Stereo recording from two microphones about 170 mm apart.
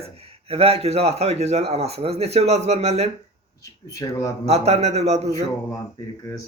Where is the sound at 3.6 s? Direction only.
20° left (ahead or behind).